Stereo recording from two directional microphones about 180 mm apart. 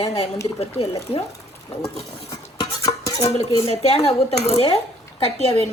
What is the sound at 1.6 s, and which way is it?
Cutlery, 15° left (ahead or behind).